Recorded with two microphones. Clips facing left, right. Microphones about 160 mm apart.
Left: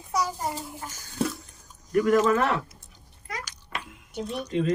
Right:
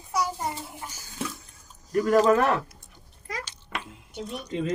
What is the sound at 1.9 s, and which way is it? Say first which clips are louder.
Speech: right 1 dB; 35° right (ahead or behind).